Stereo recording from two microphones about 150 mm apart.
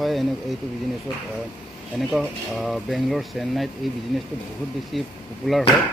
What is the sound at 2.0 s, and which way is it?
Speech, centre (ahead or behind).